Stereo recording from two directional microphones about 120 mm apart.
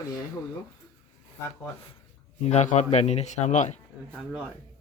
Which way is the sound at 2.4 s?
70° left (ahead or behind).